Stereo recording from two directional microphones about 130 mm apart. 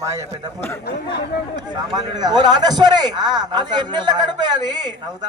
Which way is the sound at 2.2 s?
35° right (ahead or behind).